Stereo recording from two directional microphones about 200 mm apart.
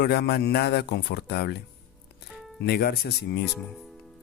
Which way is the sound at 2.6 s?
50° left (ahead or behind).